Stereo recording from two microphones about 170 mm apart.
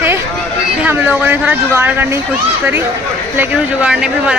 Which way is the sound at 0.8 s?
10° right (ahead or behind).